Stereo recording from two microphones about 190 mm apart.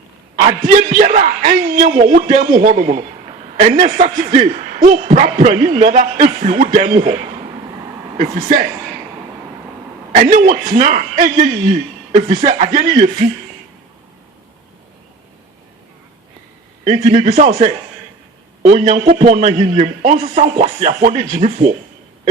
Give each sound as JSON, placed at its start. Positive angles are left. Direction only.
{"t": 0.9, "sound": "a man's voice", "side_deg": -40}
{"t": 8.2, "sound": "a man's voice", "side_deg": -40}
{"t": 10.1, "sound": "a man's voice", "side_deg": -40}
{"t": 16.8, "sound": "a man's voice", "side_deg": -40}